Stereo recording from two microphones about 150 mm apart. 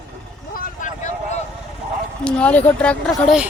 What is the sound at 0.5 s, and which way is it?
Vehicle, 60° left (ahead or behind).